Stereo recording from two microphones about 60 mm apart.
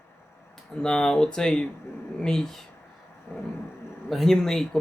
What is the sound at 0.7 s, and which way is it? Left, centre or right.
Speech, centre.